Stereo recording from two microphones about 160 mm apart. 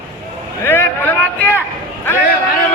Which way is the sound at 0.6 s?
15° left (ahead or behind).